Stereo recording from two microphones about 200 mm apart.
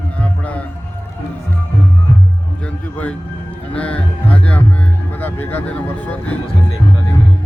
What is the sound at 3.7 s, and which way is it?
Speech, 5° left (ahead or behind).